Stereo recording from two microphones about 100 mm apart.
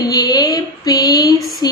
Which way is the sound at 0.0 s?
40° left (ahead or behind).